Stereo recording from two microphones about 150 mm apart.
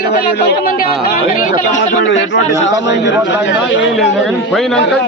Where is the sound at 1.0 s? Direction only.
75° left (ahead or behind).